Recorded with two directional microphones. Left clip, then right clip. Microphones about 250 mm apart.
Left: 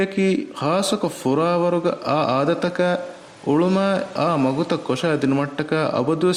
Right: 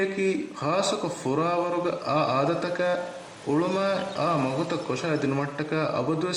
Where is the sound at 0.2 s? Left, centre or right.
Left.